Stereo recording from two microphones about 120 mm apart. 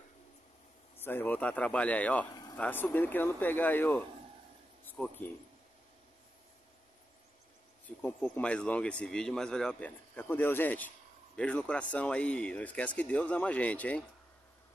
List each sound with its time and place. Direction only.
0.9 s speech: 15° left (ahead or behind)
7.8 s speech: 10° left (ahead or behind)